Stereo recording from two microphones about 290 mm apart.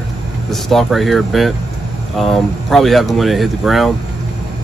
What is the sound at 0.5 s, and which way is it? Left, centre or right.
Speech, centre.